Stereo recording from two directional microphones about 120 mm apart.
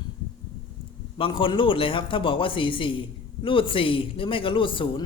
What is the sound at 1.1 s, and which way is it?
A man's voice, 45° left (ahead or behind).